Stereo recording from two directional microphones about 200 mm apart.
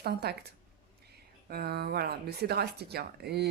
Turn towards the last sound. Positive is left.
turn(degrees=-55)  # may be behind; listen again after turning